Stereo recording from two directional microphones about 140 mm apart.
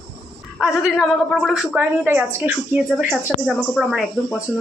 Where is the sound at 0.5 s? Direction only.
Centre (ahead or behind).